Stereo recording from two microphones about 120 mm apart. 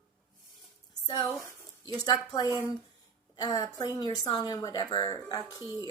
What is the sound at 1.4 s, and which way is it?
A woman's voice, 30° left (ahead or behind).